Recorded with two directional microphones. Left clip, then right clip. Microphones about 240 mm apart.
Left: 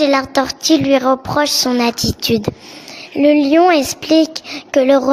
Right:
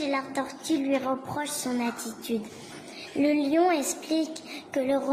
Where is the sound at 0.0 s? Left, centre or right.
Left.